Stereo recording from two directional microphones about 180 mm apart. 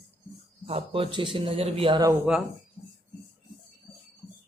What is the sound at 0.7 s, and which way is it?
A man's voice, 30° right (ahead or behind).